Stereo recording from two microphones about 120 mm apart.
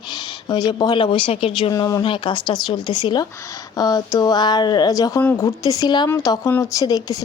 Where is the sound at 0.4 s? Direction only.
35° left (ahead or behind); by 1.7 s 50° left (ahead or behind).